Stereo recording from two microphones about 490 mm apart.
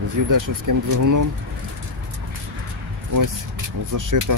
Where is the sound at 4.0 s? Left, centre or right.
Right.